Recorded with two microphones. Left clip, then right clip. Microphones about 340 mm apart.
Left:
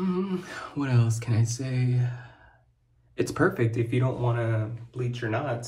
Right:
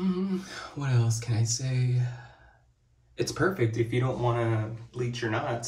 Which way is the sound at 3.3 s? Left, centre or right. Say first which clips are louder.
Left 2 dB; centre.